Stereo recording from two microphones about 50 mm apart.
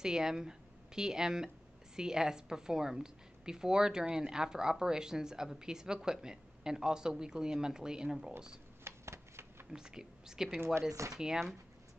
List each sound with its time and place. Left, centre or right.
0.0 s a woman's voice: centre
8.8 s shuffling cards: right
9.7 s speech: centre
11.0 s speech: right